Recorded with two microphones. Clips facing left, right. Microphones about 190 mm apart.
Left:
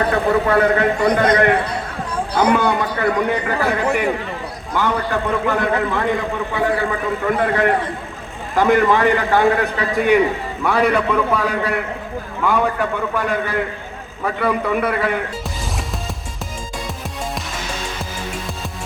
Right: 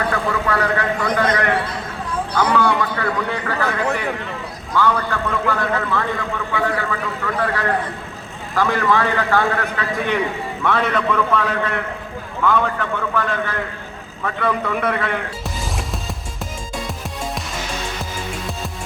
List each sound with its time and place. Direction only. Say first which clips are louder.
0.1 s a man's voice: left 5 dB; 25° left (ahead or behind); by 15.1 s 5° left (ahead or behind)